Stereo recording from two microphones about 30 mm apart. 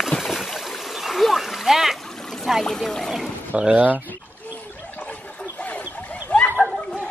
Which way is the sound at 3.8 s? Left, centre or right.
Right.